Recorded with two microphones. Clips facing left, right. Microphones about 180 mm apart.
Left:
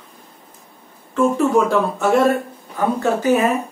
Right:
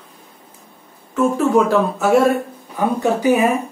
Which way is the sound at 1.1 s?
5° right (ahead or behind).